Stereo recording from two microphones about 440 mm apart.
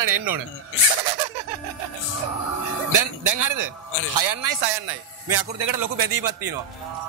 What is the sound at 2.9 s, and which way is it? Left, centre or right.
A man's voice, right.